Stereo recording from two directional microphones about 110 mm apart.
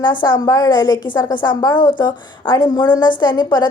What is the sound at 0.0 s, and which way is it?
Speech, 45° left (ahead or behind).